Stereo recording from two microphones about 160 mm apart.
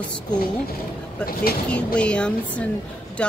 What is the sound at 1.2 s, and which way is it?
Speech, 70° left (ahead or behind).